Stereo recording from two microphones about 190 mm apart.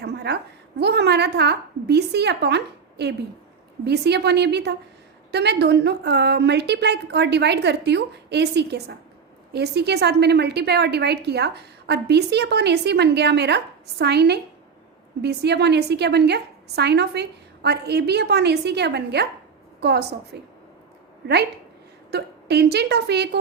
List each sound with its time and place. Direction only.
0.0 s a sound: 60° right (ahead or behind)
0.8 s a woman's voice: 60° right (ahead or behind)
22.1 s a woman's voice: 60° right (ahead or behind)